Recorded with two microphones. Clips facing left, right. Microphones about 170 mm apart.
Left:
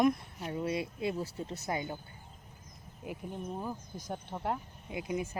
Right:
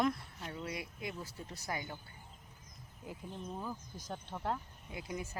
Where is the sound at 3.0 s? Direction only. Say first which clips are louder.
Left 5 dB; 15° left (ahead or behind).